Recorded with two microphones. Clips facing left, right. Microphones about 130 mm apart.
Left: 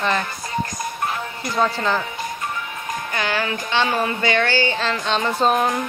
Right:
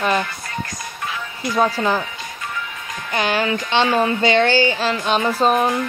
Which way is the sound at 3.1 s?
20° right (ahead or behind).